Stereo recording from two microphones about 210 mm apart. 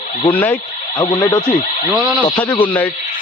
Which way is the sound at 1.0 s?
20° left (ahead or behind).